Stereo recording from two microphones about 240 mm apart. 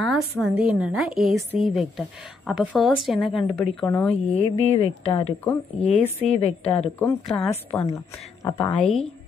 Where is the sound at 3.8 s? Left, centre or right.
Centre.